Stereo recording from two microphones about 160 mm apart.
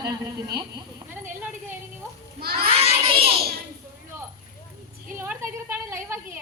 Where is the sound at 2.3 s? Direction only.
75° right (ahead or behind).